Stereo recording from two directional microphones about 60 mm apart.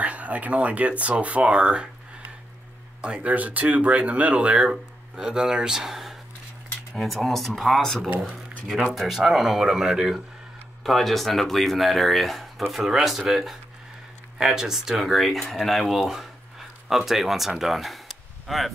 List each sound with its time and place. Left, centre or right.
0.0 s speech: right
3.0 s speech: right
4.6 s speech: centre
8.9 s speech: centre
10.8 s speech: centre